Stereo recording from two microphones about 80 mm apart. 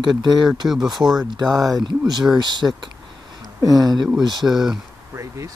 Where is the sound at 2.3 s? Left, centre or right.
Right.